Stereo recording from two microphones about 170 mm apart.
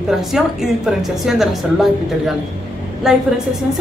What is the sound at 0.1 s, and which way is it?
A woman's voice, 5° right (ahead or behind).